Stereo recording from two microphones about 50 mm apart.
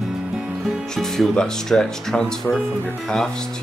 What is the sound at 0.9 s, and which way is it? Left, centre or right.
Speech, centre.